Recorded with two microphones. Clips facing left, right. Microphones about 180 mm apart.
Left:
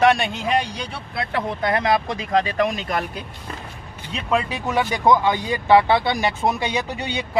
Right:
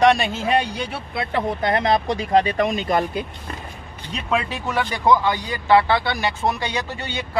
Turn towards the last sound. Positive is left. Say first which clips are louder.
# left 2 dB
turn(degrees=20)  # may be behind; listen again after turning